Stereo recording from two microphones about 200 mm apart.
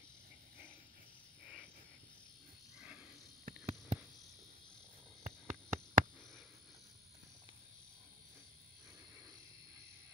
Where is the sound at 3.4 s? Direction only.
40° right (ahead or behind).